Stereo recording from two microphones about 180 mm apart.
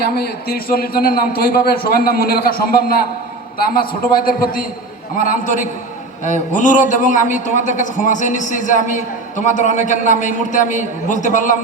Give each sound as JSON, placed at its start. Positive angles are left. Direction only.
{"t": 0.0, "sound": "a man's voice", "side_deg": 60}